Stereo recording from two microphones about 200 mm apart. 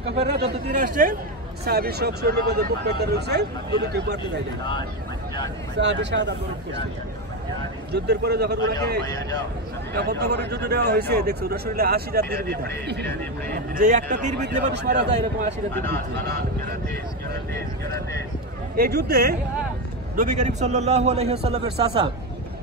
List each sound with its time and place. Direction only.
0.0 s speech: 55° right (ahead or behind)
0.8 s speech: 45° right (ahead or behind)
5.8 s speech: 60° right (ahead or behind)
7.9 s speech: 55° right (ahead or behind)
9.9 s speech: 55° right (ahead or behind); by 14.3 s 40° right (ahead or behind)
14.7 s speech: 55° right (ahead or behind)
15.7 s speech: 10° left (ahead or behind)
18.8 s speech: 50° right (ahead or behind)
20.2 s a man's voice: 35° right (ahead or behind)